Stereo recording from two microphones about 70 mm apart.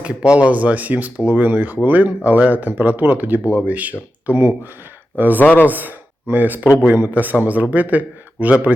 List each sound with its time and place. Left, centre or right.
0.0 s speech: centre
5.4 s speech: left
5.6 s speech: right